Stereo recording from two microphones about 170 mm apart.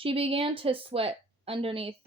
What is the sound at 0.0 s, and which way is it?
A woman's voice, 35° right (ahead or behind).